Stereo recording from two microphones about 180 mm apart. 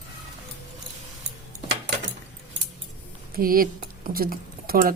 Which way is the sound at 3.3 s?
55° right (ahead or behind).